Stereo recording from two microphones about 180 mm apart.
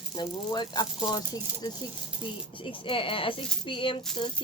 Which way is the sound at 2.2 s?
30° left (ahead or behind).